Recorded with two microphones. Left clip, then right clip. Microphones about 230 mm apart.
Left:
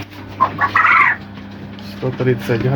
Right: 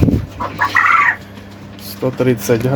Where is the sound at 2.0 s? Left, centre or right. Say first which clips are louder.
Right 3 dB; right.